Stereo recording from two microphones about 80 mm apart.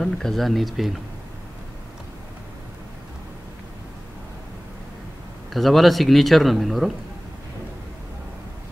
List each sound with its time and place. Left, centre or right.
0.0 s speech: centre
5.5 s speech: centre